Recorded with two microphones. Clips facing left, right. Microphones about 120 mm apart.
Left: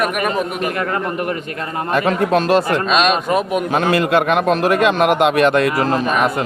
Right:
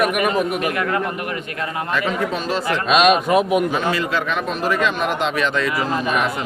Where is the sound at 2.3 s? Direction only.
70° left (ahead or behind); by 2.8 s 50° left (ahead or behind).